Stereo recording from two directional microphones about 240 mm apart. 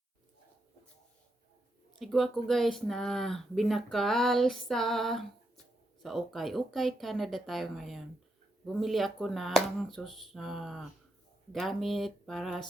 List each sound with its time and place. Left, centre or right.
2.0 s speech: centre